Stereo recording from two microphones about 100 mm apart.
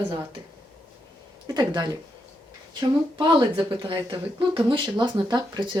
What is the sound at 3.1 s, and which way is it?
Speech, 55° right (ahead or behind).